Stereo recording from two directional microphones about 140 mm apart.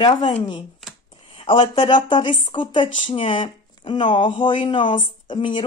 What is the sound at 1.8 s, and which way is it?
Speech, 35° left (ahead or behind).